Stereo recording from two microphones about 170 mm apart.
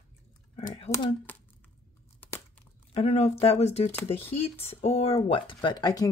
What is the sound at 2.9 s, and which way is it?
Speech, 35° left (ahead or behind).